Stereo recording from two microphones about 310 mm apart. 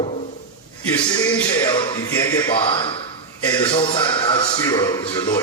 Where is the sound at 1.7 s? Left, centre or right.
Centre.